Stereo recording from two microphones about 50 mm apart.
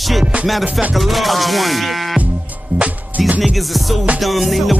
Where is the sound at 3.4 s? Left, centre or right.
Centre.